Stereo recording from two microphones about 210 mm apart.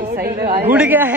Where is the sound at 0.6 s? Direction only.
10° right (ahead or behind).